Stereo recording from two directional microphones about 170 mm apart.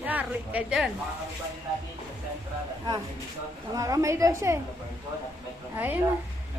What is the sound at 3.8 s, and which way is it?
Speech, 20° right (ahead or behind).